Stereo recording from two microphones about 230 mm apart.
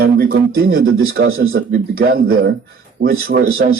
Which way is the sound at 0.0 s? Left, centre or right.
Right.